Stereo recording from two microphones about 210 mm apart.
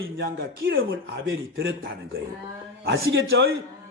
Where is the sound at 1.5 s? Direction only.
50° right (ahead or behind).